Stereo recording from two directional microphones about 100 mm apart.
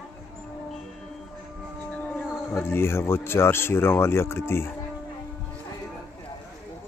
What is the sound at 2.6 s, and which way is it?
Speech, 25° left (ahead or behind).